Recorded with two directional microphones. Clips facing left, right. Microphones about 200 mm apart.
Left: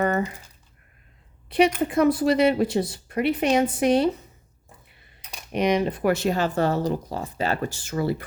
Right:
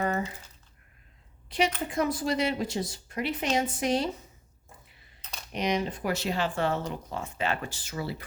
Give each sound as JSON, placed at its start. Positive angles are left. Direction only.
{"t": 1.5, "sound": "a sound", "side_deg": 60}
{"t": 1.9, "sound": "a woman's voice", "side_deg": 60}
{"t": 5.2, "sound": "typing", "side_deg": 10}
{"t": 5.5, "sound": "speech", "side_deg": 60}